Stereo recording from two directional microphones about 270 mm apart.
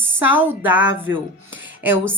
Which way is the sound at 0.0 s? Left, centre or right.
Centre.